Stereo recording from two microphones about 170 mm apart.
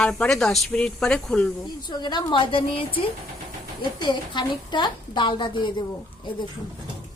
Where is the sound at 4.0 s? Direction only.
25° left (ahead or behind).